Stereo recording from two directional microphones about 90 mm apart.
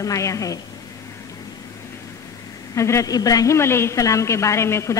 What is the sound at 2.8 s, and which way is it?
A woman's voice, 35° left (ahead or behind).